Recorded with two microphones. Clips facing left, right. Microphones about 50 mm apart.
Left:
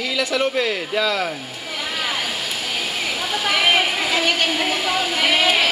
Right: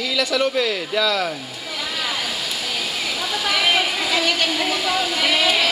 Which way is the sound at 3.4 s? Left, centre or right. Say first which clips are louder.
Left 2 dB; centre.